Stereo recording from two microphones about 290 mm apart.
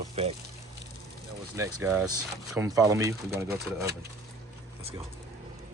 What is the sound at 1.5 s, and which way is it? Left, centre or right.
Speech, centre.